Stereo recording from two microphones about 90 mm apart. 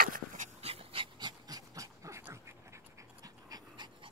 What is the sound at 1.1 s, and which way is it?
Dog, 50° right (ahead or behind).